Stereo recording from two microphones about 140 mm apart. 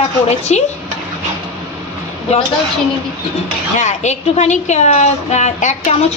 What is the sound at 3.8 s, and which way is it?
A woman's voice, 55° left (ahead or behind).